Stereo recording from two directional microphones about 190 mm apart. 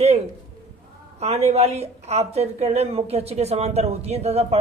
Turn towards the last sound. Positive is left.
turn(degrees=-35)  # may be behind; listen again after turning